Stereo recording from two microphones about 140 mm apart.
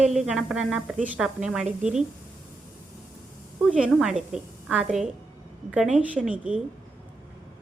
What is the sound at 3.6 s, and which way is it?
A woman's voice, 10° right (ahead or behind).